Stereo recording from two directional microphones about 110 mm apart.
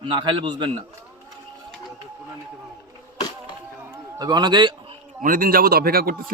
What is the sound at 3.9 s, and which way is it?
Speech, 35° right (ahead or behind).